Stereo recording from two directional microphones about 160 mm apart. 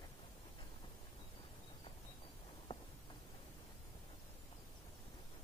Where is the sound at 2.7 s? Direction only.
30° left (ahead or behind).